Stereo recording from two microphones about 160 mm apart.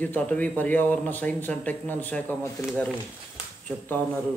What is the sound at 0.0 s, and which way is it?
Speech, 10° left (ahead or behind).